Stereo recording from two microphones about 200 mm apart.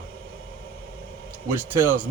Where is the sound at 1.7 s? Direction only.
10° right (ahead or behind).